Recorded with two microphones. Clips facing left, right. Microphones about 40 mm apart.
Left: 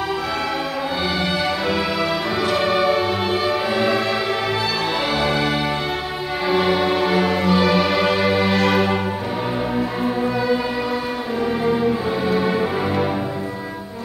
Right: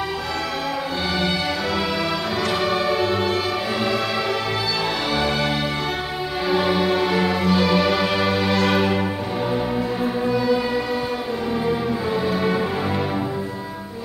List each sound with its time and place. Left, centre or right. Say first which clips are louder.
2.4 s music: left 4 dB; centre
5.1 s music: left 1 dB; centre
10.0 s music: even; centre
12.3 s music: left 4 dB; centre